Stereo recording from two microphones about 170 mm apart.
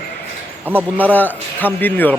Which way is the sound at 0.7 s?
10° right (ahead or behind).